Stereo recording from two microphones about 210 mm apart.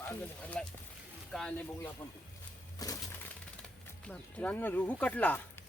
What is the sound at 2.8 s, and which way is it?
Music, 15° left (ahead or behind).